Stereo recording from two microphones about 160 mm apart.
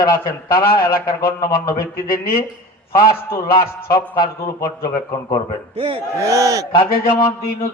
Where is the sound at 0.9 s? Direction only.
70° left (ahead or behind).